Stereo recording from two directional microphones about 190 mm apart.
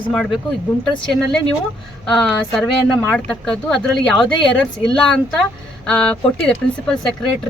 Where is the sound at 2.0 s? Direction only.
5° left (ahead or behind).